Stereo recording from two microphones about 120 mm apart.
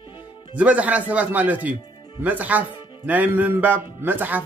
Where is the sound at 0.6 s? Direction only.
10° right (ahead or behind).